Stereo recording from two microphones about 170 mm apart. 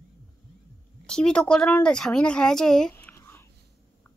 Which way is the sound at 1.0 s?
5° left (ahead or behind).